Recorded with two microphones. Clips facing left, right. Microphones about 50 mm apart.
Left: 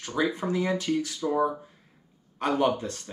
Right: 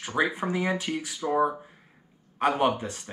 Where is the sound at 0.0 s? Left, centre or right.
Right.